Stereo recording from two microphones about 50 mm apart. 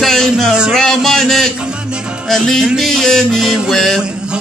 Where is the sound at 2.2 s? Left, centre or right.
Centre.